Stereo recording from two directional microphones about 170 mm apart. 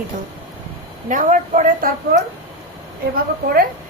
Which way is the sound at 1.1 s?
50° right (ahead or behind).